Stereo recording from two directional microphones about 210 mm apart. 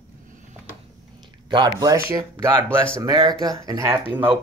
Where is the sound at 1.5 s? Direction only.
20° right (ahead or behind).